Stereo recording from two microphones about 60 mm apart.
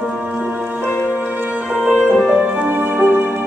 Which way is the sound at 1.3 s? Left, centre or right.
Right.